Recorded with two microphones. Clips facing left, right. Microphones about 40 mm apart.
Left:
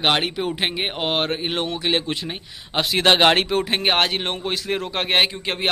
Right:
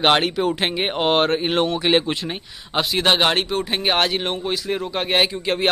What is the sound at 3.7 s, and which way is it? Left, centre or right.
A man's voice, left.